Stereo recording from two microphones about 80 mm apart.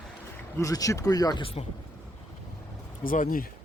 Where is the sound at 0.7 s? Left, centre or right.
Left.